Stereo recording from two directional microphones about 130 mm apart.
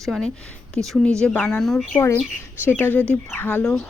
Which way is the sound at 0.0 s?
5° left (ahead or behind).